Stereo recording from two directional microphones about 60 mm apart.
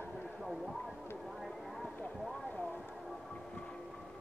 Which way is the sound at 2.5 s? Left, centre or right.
Left.